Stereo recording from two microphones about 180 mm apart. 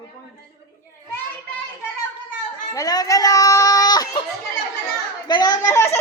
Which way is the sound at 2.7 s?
20° left (ahead or behind).